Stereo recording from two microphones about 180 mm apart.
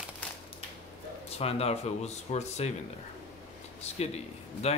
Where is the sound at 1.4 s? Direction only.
35° left (ahead or behind).